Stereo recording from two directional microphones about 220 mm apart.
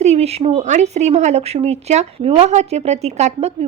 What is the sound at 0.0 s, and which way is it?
A woman's voice, 30° right (ahead or behind).